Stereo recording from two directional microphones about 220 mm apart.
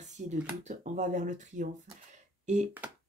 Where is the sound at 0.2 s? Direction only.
35° right (ahead or behind).